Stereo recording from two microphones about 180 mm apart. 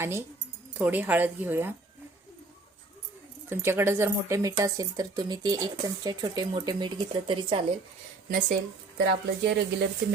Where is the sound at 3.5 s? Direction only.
15° right (ahead or behind); by 7.6 s 30° right (ahead or behind).